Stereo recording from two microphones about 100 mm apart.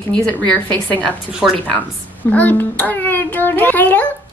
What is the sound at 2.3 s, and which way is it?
A woman's voice, 15° left (ahead or behind).